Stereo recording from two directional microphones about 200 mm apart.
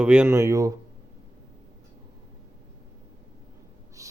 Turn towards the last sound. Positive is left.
turn(degrees=-15)  # may be behind; listen again after turning